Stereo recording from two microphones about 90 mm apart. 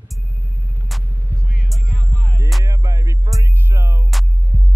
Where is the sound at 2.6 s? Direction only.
35° right (ahead or behind).